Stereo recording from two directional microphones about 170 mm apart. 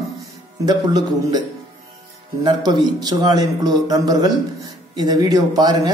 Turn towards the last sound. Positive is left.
turn(degrees=-25)  # may be behind; listen again after turning